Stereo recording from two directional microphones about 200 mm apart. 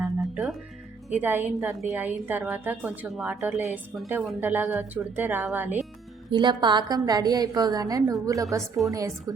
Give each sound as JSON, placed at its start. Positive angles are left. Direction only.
{"t": 0.0, "sound": "music", "side_deg": -5}
{"t": 1.1, "sound": "a woman's voice", "side_deg": -10}
{"t": 6.3, "sound": "a woman's voice", "side_deg": -20}